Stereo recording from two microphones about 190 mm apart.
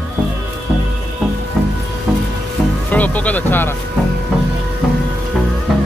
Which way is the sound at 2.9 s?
10° left (ahead or behind).